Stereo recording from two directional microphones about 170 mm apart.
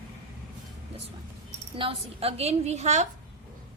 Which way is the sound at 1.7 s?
35° right (ahead or behind).